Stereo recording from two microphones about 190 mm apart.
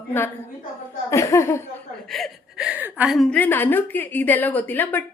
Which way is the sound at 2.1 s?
Centre (ahead or behind).